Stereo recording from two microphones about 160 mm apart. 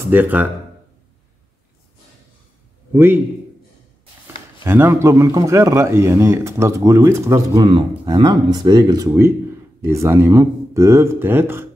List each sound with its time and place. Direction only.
0.1 s a man's voice: 10° right (ahead or behind)
2.9 s a man's voice: 15° right (ahead or behind)
4.6 s a man's voice: 15° right (ahead or behind)
7.6 s a man's voice: 30° right (ahead or behind); by 11.6 s 15° right (ahead or behind)